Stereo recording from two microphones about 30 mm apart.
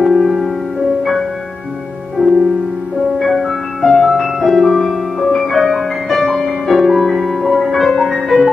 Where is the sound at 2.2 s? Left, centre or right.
Right.